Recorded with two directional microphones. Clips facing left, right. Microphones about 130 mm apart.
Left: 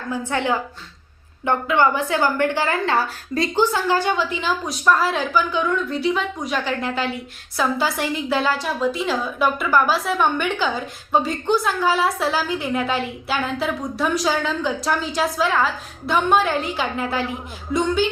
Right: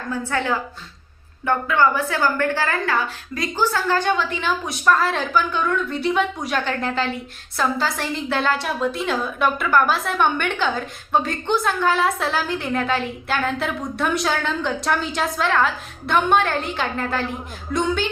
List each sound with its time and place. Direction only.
0.1 s a woman's voice: 15° left (ahead or behind)
2.9 s a woman's voice: 30° left (ahead or behind)
3.6 s a woman's voice: 15° left (ahead or behind)
4.4 s a woman's voice: centre (ahead or behind)